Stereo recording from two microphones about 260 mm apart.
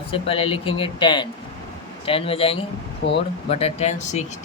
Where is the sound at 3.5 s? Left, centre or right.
Left.